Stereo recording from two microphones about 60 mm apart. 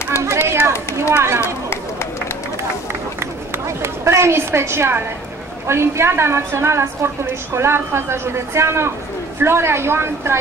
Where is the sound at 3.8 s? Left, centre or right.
Right.